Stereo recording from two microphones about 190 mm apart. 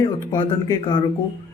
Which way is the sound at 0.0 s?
20° left (ahead or behind).